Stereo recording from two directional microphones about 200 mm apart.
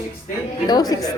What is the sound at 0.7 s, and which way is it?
Speech, 20° left (ahead or behind).